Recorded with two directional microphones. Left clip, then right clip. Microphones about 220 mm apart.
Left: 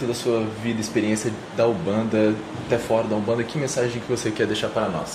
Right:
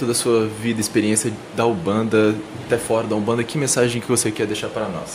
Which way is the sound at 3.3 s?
45° right (ahead or behind).